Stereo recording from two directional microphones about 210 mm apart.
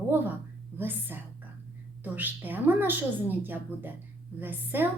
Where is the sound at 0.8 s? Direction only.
10° right (ahead or behind).